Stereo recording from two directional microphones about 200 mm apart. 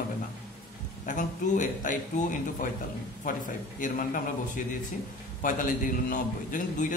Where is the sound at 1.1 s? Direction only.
40° left (ahead or behind).